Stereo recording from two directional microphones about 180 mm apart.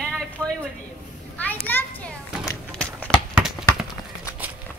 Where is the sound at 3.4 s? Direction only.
Centre (ahead or behind).